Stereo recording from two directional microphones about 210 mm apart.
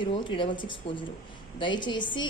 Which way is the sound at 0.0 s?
25° left (ahead or behind).